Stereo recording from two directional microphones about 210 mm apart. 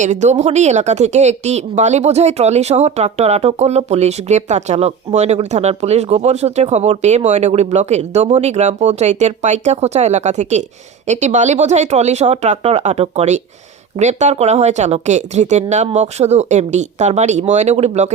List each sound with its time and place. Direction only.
0.0 s speech: 35° right (ahead or behind)